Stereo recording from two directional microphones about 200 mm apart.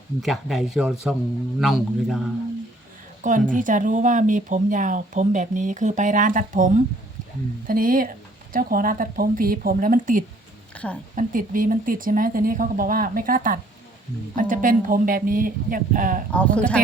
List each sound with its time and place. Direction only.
0.2 s speech: centre (ahead or behind)
3.2 s a woman's voice: 40° right (ahead or behind)
10.8 s speech: 5° left (ahead or behind)
11.1 s speech: 40° right (ahead or behind)
16.3 s speech: 5° left (ahead or behind)